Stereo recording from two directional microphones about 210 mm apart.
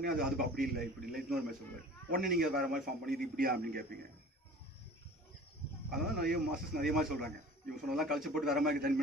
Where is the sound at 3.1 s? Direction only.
45° right (ahead or behind).